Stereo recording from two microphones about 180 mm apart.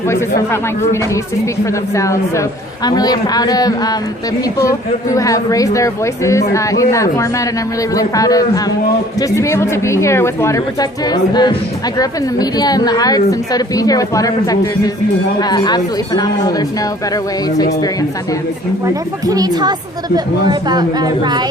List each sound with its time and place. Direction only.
0.1 s speech: 15° left (ahead or behind)
2.0 s a woman's voice: 15° left (ahead or behind)
19.3 s a woman's voice: 20° right (ahead or behind)